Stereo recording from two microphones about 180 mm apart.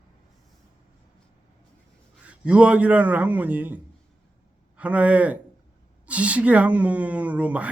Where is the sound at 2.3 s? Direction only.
5° right (ahead or behind).